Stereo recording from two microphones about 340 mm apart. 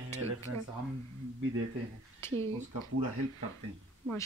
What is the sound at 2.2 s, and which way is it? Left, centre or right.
Speech, centre.